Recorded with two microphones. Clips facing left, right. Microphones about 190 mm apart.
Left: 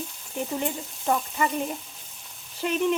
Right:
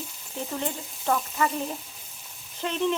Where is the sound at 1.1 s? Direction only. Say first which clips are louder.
Even; 15° left (ahead or behind).